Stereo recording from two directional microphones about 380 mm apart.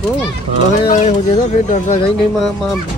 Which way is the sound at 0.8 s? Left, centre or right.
Centre.